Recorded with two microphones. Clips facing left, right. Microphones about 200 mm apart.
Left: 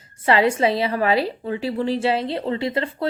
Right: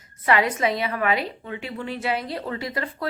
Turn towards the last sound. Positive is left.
turn(degrees=25)  # may be behind; listen again after turning